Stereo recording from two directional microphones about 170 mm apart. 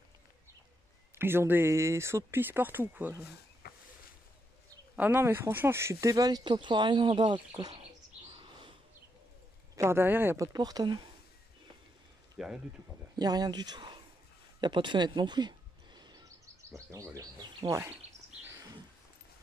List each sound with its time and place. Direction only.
1.1 s speech: 15° right (ahead or behind)
3.6 s vehicle: 65° left (ahead or behind)
4.9 s speech: 10° right (ahead or behind); by 7.8 s 30° right (ahead or behind)
8.3 s bird: 30° right (ahead or behind)
9.8 s speech: 15° right (ahead or behind)
12.4 s speech: 5° right (ahead or behind)
13.1 s speech: 20° right (ahead or behind)
14.6 s a sound: 25° right (ahead or behind)
16.7 s speech: 15° right (ahead or behind)